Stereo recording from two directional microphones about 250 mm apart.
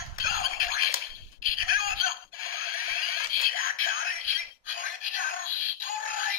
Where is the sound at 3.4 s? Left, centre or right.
Left.